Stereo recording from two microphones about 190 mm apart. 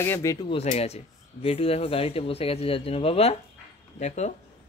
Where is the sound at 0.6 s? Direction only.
35° left (ahead or behind).